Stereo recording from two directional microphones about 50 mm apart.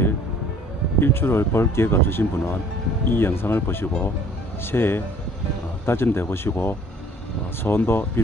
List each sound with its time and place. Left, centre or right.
0.9 s speech: left